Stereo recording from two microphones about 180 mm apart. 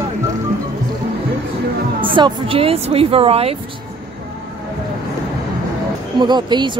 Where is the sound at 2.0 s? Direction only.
30° right (ahead or behind).